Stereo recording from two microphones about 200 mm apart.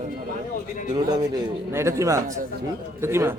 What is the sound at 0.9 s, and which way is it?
A man's voice, 20° right (ahead or behind).